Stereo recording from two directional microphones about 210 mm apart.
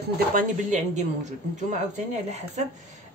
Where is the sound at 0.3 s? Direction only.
35° right (ahead or behind).